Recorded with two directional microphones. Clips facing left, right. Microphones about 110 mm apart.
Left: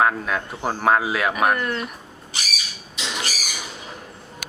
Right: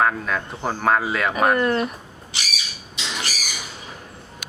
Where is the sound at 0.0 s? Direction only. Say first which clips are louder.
Left 1 dB; 5° left (ahead or behind).